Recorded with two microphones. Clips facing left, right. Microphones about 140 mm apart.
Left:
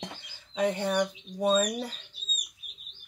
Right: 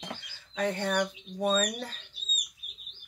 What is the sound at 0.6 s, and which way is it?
Speech, 15° left (ahead or behind).